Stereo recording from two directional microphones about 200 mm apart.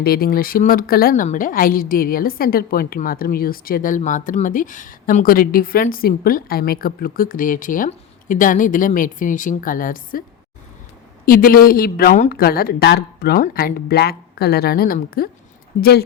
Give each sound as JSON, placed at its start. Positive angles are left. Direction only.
{"t": 0.0, "sound": "a woman's voice", "side_deg": 50}
{"t": 11.3, "sound": "a woman's voice", "side_deg": 45}